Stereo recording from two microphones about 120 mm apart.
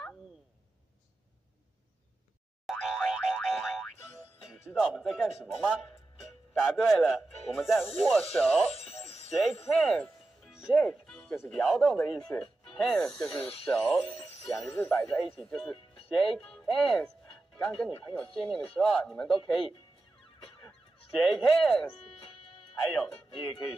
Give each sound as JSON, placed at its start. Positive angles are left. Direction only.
{"t": 2.6, "sound": "boing", "side_deg": 0}
{"t": 4.5, "sound": "speech", "side_deg": -5}
{"t": 8.7, "sound": "music", "side_deg": 55}
{"t": 9.7, "sound": "music", "side_deg": 5}
{"t": 11.4, "sound": "speech", "side_deg": 0}
{"t": 21.2, "sound": "speech", "side_deg": 0}